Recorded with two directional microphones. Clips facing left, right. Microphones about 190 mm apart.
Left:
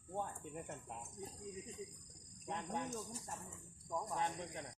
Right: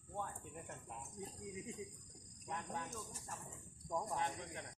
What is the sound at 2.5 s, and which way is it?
Speech, 20° left (ahead or behind).